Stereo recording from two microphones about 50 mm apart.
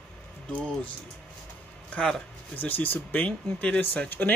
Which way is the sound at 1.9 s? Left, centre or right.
Centre.